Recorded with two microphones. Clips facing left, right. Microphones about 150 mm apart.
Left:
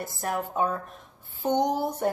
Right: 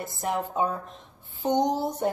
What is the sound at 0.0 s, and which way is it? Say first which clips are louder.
Speech: right 1 dB; 20° right (ahead or behind).